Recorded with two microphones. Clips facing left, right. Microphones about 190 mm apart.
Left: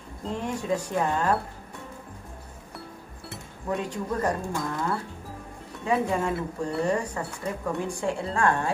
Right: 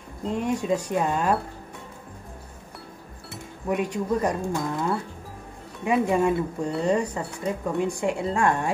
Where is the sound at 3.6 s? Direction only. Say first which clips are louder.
Right 4 dB; 15° right (ahead or behind).